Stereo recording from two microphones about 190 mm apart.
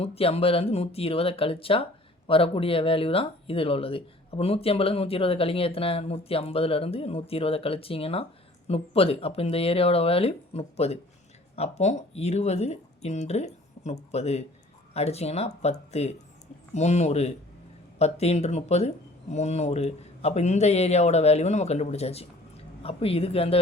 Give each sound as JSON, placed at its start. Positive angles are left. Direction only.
{"t": 0.0, "sound": "speech", "side_deg": 30}